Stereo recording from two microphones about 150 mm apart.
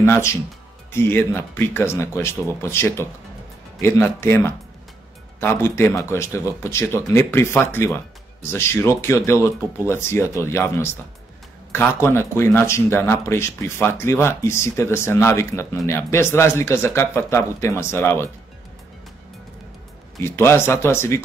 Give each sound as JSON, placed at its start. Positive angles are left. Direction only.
{"t": 0.0, "sound": "speech", "side_deg": 15}
{"t": 20.2, "sound": "speech", "side_deg": 15}